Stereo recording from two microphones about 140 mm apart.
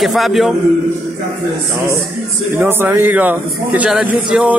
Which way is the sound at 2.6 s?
15° right (ahead or behind).